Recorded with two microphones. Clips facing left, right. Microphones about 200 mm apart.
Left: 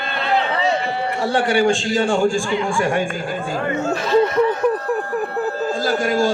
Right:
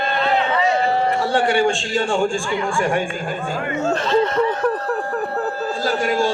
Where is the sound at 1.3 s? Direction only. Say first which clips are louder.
Left 4 dB; 40° left (ahead or behind).